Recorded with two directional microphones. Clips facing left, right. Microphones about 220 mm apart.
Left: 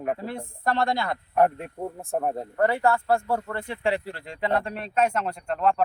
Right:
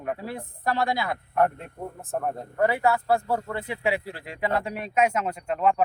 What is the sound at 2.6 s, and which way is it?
Speech, 5° right (ahead or behind).